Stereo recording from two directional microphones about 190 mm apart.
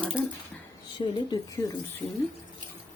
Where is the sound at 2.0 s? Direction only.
Centre (ahead or behind).